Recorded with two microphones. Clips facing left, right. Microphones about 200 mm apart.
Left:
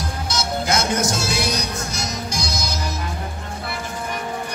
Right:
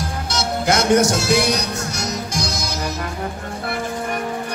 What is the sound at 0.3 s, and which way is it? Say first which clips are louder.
Music: right 3 dB; 65° right (ahead or behind).